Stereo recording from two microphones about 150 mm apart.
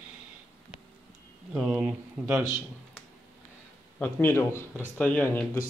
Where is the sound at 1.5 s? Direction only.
5° right (ahead or behind).